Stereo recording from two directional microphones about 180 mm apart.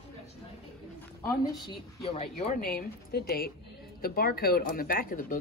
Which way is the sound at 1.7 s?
35° left (ahead or behind).